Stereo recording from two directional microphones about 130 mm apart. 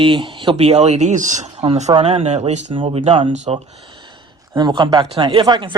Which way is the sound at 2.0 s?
55° right (ahead or behind).